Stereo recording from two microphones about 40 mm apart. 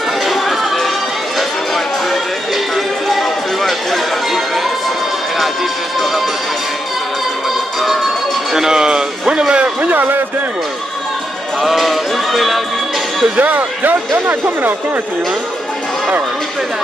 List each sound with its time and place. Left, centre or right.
0.2 s music: centre
2.0 s music: centre
8.5 s speech: centre
9.8 s speech: right
11.6 s music: centre
13.4 s speech: right